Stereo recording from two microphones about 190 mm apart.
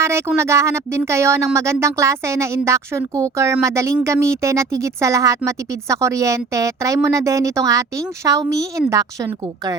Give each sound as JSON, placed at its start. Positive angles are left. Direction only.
{"t": 0.0, "sound": "speech", "side_deg": -15}